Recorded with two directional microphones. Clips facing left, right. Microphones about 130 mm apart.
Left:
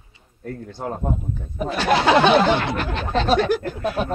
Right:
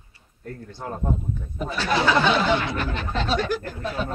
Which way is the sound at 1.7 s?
75° left (ahead or behind).